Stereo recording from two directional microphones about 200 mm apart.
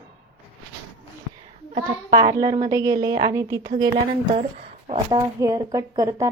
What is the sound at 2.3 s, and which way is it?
Speech, 20° right (ahead or behind).